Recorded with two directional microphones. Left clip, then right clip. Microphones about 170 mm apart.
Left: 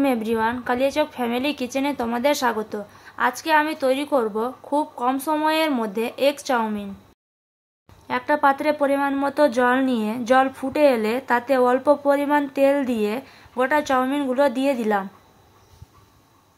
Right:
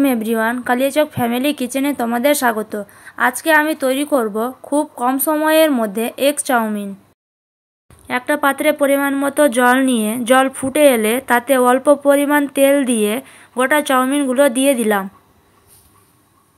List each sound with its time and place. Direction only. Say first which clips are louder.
0.0 s speech: right 4 dB; 25° right (ahead or behind)
8.1 s speech: right 2 dB; 25° right (ahead or behind)